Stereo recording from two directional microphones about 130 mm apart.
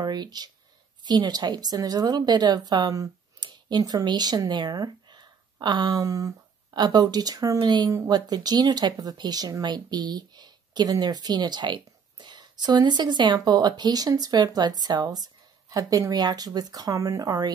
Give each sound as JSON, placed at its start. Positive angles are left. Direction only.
{"t": 0.0, "sound": "speech", "side_deg": -35}